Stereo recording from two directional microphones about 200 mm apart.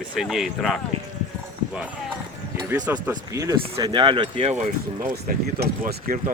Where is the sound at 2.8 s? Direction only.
10° right (ahead or behind).